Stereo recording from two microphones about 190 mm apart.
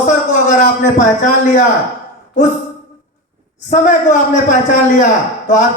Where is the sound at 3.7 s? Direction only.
40° left (ahead or behind).